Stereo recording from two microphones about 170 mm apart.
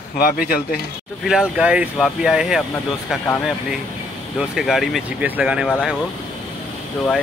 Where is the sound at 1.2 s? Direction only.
5° right (ahead or behind).